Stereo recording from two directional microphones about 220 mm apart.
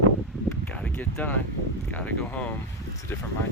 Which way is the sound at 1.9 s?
5° left (ahead or behind).